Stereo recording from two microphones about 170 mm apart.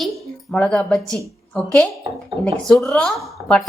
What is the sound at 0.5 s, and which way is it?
A woman's voice, 5° left (ahead or behind).